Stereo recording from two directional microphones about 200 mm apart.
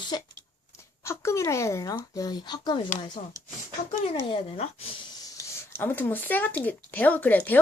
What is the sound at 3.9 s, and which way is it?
Speech, 30° left (ahead or behind).